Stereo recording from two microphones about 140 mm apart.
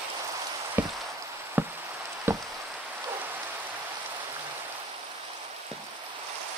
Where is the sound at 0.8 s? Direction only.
15° right (ahead or behind).